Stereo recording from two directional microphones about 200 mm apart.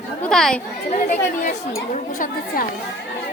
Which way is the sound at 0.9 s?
40° left (ahead or behind).